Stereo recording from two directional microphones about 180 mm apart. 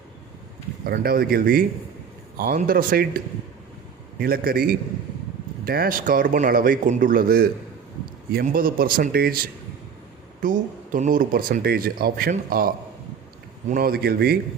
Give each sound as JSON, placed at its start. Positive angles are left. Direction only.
{"t": 0.9, "sound": "speech", "side_deg": -60}
{"t": 4.2, "sound": "speech", "side_deg": -55}